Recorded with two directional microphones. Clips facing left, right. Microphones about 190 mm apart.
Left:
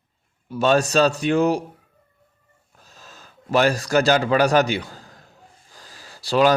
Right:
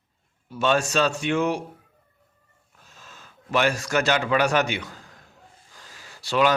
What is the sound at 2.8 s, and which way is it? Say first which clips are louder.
Speech: left 2 dB; 40° left (ahead or behind).